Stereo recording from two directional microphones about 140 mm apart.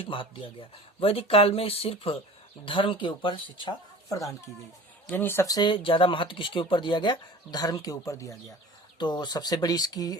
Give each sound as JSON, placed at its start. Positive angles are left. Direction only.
{"t": 0.0, "sound": "speech", "side_deg": 40}